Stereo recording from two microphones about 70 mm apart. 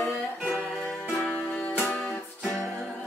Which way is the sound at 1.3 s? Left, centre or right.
Left.